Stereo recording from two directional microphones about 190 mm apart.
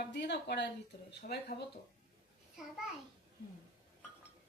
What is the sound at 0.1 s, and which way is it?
Speech, 65° left (ahead or behind).